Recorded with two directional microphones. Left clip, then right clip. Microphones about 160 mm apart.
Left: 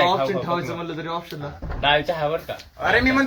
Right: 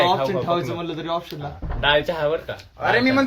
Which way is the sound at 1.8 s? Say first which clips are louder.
Right 1 dB; 75° right (ahead or behind).